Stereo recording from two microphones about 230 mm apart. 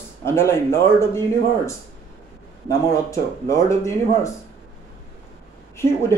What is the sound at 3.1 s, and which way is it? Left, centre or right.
Speech, centre.